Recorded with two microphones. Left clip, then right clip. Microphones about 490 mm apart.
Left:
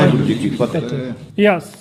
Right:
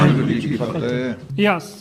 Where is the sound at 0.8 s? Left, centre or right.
Right.